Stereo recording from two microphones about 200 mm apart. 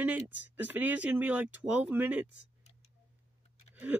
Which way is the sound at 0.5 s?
10° right (ahead or behind).